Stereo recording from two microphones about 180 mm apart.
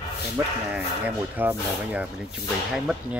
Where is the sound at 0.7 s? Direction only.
10° right (ahead or behind).